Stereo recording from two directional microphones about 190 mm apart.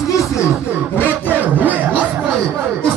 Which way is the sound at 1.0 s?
10° left (ahead or behind).